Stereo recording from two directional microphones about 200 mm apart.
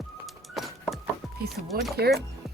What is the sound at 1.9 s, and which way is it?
Speech, 55° right (ahead or behind).